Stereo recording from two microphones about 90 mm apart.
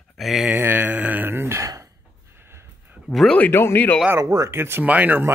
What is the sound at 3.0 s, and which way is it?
Speech, 5° left (ahead or behind).